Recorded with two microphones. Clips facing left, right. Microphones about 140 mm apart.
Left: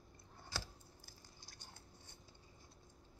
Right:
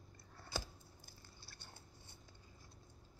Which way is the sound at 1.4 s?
15° left (ahead or behind).